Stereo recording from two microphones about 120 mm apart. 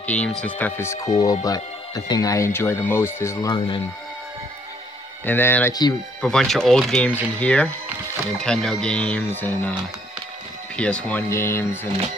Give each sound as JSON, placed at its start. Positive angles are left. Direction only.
{"t": 0.0, "sound": "speech", "side_deg": 10}
{"t": 3.5, "sound": "speech", "side_deg": 45}
{"t": 5.2, "sound": "speech", "side_deg": 15}
{"t": 5.7, "sound": "speech", "side_deg": 35}
{"t": 6.2, "sound": "speech", "side_deg": 5}
{"t": 10.8, "sound": "speech", "side_deg": 10}
{"t": 11.2, "sound": "speech", "side_deg": 20}